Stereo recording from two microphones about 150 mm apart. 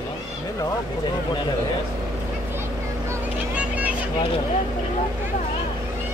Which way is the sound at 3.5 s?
10° right (ahead or behind).